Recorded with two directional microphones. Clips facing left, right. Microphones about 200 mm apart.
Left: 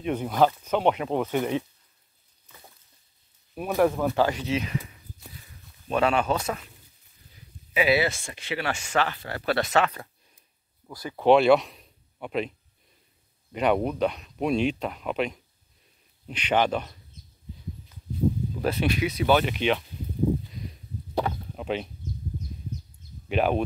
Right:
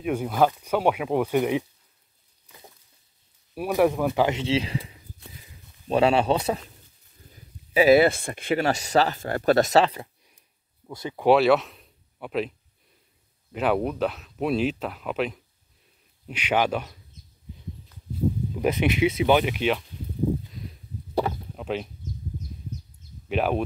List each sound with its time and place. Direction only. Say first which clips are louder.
0.0 s speech: even; 5° right (ahead or behind)
3.5 s speech: right 1 dB; 10° right (ahead or behind); by 6.6 s 30° right (ahead or behind)
7.7 s speech: right 7 dB; 45° right (ahead or behind)
10.9 s speech: right 3 dB; 20° right (ahead or behind)
11.2 s speech: even; 5° right (ahead or behind)
18.5 s speech: right 3 dB; 15° right (ahead or behind)
20.5 s a sound: left 1 dB; centre (ahead or behind)
23.2 s speech: left 1 dB; centre (ahead or behind)